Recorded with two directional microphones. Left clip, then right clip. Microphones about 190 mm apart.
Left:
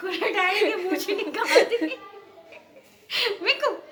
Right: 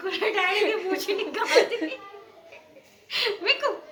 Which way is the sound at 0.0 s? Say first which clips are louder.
Left 1 dB; 35° left (ahead or behind).